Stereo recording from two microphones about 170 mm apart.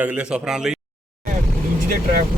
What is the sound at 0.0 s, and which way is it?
Speech, 5° right (ahead or behind).